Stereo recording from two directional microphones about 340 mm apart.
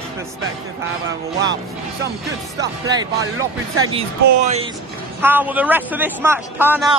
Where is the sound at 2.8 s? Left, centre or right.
Centre.